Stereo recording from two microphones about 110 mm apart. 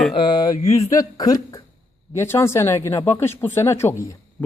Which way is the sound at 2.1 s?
25° left (ahead or behind).